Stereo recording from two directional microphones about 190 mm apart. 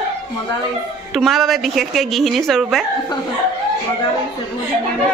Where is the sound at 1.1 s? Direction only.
Centre (ahead or behind).